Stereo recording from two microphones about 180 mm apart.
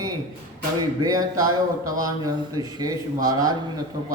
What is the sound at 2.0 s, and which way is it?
Speech, 20° right (ahead or behind).